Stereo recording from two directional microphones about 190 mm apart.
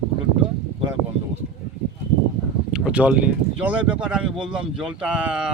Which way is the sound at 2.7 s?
5° right (ahead or behind).